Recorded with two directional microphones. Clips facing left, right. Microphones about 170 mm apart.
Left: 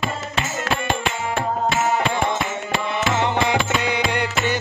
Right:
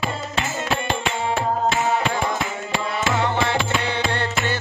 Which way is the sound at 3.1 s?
20° left (ahead or behind).